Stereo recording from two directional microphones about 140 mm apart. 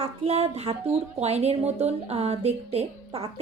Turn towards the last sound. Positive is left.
turn(degrees=-45)  # may be behind; listen again after turning